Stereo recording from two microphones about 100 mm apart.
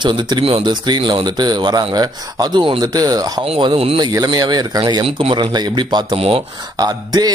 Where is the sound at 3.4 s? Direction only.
65° right (ahead or behind).